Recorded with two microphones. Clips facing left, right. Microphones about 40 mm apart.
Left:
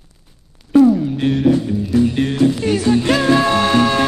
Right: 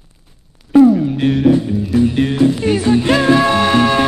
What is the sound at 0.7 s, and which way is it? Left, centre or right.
Music, right.